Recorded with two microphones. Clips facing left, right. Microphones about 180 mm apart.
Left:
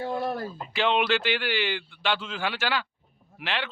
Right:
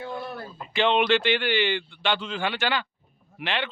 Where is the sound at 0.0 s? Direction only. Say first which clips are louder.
Left 5 dB; 40° left (ahead or behind).